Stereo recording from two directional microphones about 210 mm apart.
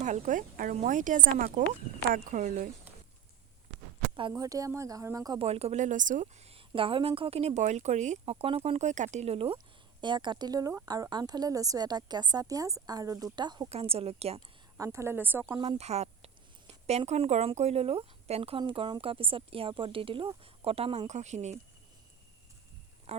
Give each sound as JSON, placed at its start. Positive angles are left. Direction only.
{"t": 0.0, "sound": "speech", "side_deg": -35}
{"t": 4.1, "sound": "a woman's voice", "side_deg": -20}
{"t": 14.8, "sound": "speech", "side_deg": -15}
{"t": 15.6, "sound": "a woman's voice", "side_deg": -30}
{"t": 23.1, "sound": "speech", "side_deg": -30}